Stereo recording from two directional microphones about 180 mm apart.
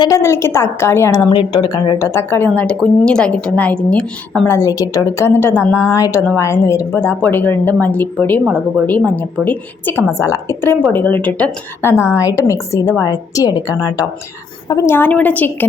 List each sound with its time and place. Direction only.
0.0 s a woman's voice: 15° left (ahead or behind)
1.3 s a woman's voice: 25° left (ahead or behind); by 4.5 s 5° left (ahead or behind)
4.5 s a woman's voice: 20° left (ahead or behind)